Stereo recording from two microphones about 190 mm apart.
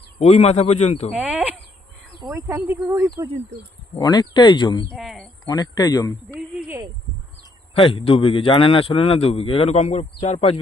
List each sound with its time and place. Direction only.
0.2 s a man's voice: 35° left (ahead or behind)
1.1 s speech: 5° right (ahead or behind)
3.9 s speech: 20° left (ahead or behind)
4.9 s speech: centre (ahead or behind)
5.5 s speech: 20° left (ahead or behind)
6.2 s speech: 10° right (ahead or behind)
7.7 s a man's voice: 30° left (ahead or behind)